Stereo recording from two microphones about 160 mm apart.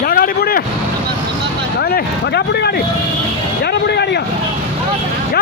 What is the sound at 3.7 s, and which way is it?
Vehicle, 90° left.